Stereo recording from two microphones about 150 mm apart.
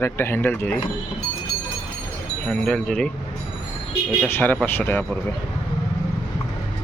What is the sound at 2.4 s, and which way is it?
Speech, 5° left (ahead or behind).